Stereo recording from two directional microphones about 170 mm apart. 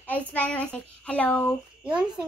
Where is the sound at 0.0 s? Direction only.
10° left (ahead or behind).